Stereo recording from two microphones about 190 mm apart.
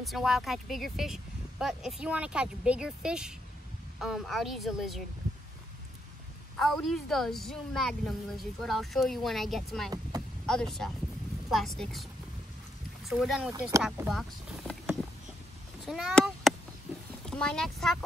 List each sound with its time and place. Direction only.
0.0 s speech: centre (ahead or behind)
6.5 s speech: centre (ahead or behind)
13.5 s speech: 15° right (ahead or behind)
13.8 s vehicle: centre (ahead or behind)
15.9 s speech: centre (ahead or behind)